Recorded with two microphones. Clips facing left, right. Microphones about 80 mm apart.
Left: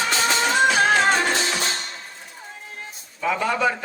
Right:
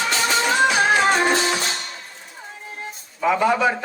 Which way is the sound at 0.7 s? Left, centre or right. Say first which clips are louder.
Right 1 dB; centre.